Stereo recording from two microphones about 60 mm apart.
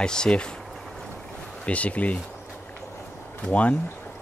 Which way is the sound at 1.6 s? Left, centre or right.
Left.